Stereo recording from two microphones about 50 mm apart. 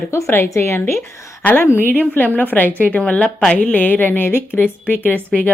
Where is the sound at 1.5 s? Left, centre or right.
Left.